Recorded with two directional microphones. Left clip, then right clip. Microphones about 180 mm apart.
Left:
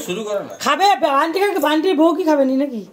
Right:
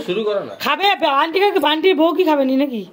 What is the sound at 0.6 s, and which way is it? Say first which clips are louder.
Speech: left 2 dB; centre (ahead or behind).